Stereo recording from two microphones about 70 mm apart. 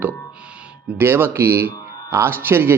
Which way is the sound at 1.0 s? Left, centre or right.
Right.